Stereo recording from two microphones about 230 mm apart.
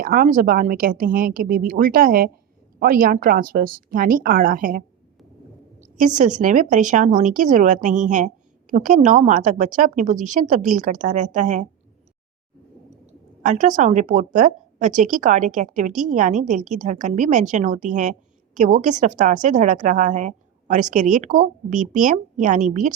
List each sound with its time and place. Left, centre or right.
0.0 s a woman's voice: right
5.8 s a woman's voice: right
13.4 s a woman's voice: right